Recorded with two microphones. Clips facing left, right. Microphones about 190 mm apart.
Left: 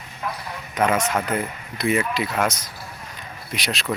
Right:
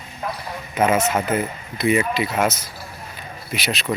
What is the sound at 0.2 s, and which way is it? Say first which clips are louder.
Speech: right 2 dB; 35° right (ahead or behind).